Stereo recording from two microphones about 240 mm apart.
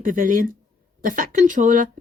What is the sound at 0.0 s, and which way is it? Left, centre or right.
Speech, right.